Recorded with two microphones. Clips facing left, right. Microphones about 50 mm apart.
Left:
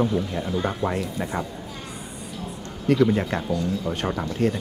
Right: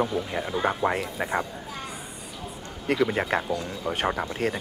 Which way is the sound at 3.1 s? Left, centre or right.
Centre.